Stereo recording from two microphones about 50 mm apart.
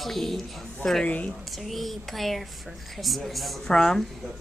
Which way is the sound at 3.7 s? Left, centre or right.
Centre.